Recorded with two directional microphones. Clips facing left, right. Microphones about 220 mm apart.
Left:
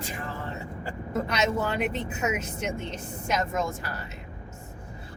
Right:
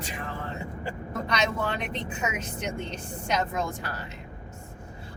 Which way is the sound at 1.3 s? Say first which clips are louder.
Even; 5° left (ahead or behind).